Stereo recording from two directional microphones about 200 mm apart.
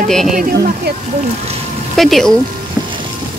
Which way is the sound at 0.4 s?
50° right (ahead or behind).